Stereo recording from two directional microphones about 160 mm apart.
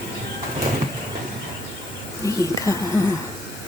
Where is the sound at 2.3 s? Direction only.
20° left (ahead or behind).